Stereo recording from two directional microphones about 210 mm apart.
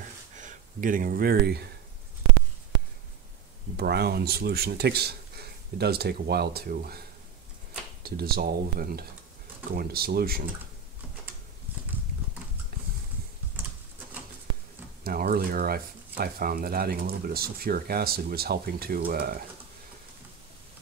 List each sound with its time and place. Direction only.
0.4 s speech: 40° right (ahead or behind)
3.7 s speech: 50° right (ahead or behind)
15.0 s speech: 45° right (ahead or behind)